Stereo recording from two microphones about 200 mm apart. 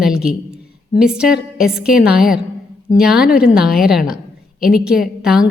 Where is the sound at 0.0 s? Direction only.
5° right (ahead or behind).